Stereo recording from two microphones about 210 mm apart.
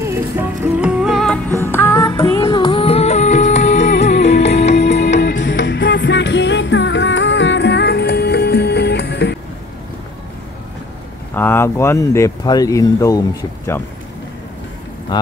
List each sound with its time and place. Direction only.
0.0 s music: 10° right (ahead or behind)
1.6 s music: 10° left (ahead or behind)
2.1 s music: 25° left (ahead or behind)
4.7 s music: 55° left (ahead or behind)
11.3 s speech: 10° left (ahead or behind)